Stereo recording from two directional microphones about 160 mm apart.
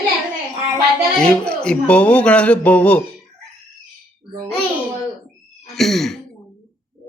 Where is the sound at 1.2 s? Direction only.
5° left (ahead or behind).